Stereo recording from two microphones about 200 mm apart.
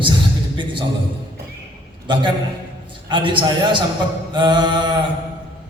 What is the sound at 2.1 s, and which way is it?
A man's voice, 25° right (ahead or behind).